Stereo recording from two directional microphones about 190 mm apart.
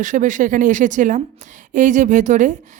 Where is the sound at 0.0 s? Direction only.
45° right (ahead or behind).